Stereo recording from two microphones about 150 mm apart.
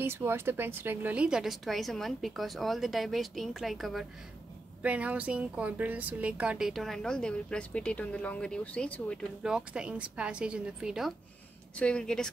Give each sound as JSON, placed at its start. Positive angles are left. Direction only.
{"t": 0.0, "sound": "speech", "side_deg": -15}
{"t": 9.4, "sound": "a woman's voice", "side_deg": -5}